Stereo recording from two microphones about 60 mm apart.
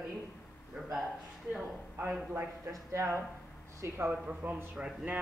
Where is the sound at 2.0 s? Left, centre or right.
Centre.